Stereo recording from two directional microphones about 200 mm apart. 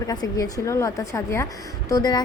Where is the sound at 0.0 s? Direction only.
20° left (ahead or behind).